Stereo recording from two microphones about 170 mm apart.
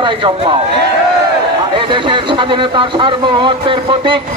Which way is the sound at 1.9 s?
30° right (ahead or behind).